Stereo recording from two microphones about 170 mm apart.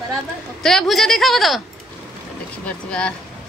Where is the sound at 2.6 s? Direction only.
5° left (ahead or behind).